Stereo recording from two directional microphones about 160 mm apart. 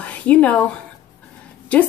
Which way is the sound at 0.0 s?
10° left (ahead or behind).